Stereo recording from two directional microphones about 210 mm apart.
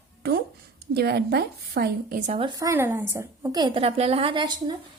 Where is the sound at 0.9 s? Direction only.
50° right (ahead or behind).